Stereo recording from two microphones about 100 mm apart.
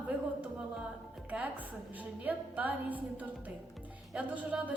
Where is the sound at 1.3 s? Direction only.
15° right (ahead or behind).